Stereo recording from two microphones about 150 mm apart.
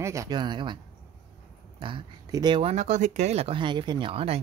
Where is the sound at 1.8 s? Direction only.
35° right (ahead or behind).